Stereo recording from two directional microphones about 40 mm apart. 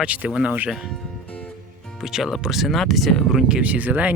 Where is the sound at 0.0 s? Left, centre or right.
Right.